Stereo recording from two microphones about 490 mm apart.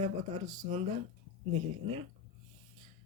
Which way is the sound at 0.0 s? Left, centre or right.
Centre.